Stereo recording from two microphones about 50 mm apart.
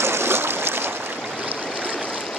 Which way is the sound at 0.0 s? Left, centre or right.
Right.